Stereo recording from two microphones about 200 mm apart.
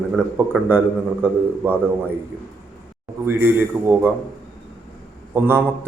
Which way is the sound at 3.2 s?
10° right (ahead or behind).